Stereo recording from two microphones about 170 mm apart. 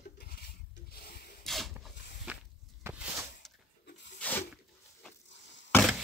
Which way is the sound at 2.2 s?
10° right (ahead or behind).